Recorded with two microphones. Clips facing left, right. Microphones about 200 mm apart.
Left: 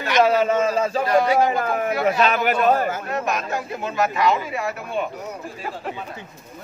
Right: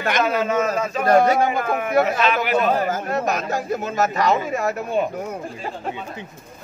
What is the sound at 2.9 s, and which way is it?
Speech, 40° right (ahead or behind).